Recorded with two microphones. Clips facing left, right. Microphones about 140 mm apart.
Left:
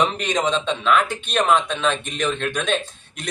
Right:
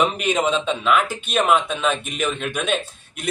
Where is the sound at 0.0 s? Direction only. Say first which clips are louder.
Right 1 dB; 10° right (ahead or behind).